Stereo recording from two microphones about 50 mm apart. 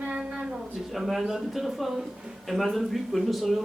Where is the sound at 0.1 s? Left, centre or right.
Centre.